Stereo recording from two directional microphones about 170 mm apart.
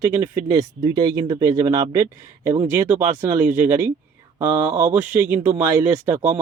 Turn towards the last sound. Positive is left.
turn(degrees=-15)  # may be behind; listen again after turning